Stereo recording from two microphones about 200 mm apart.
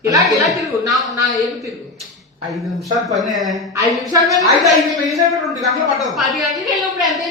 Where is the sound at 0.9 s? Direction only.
Centre (ahead or behind).